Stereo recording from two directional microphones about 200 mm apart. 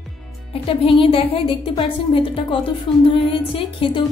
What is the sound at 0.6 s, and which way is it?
Speech, 25° left (ahead or behind).